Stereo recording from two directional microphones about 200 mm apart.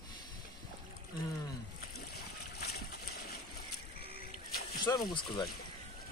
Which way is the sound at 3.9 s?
30° right (ahead or behind).